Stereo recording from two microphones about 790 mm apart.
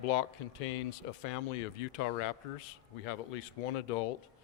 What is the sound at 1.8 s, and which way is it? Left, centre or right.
Speech, left.